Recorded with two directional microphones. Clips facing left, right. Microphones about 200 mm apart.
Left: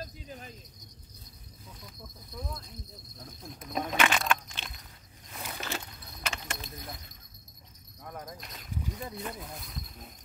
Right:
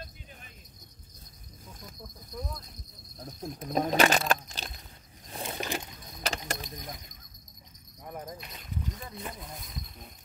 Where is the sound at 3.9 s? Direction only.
40° right (ahead or behind).